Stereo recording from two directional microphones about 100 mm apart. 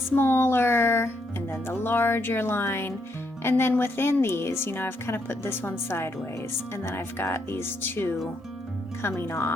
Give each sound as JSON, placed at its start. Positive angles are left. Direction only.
{"t": 0.2, "sound": "speech", "side_deg": 25}